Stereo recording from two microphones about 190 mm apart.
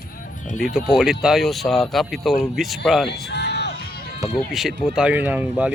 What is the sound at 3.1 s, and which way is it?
Music, 60° left (ahead or behind).